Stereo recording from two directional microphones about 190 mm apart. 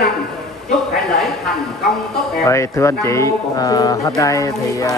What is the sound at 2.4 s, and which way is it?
Speech, 15° left (ahead or behind).